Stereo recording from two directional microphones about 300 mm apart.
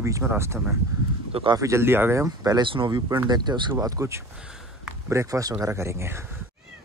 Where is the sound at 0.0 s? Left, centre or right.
Centre.